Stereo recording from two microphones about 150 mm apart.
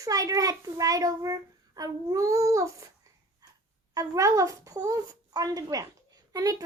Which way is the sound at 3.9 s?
20° right (ahead or behind).